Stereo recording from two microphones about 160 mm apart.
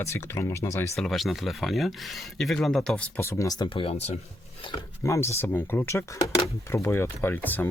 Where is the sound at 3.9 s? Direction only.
40° left (ahead or behind).